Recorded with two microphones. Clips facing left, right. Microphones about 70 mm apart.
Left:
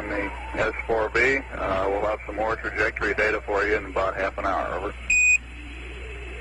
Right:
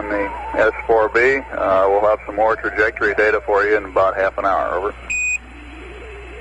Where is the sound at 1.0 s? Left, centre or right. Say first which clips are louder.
Right 6 dB; right.